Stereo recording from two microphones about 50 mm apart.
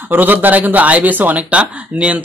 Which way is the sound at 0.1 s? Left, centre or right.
Right.